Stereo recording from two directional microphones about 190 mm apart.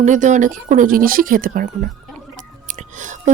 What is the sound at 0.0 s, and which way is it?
Speech, 40° right (ahead or behind).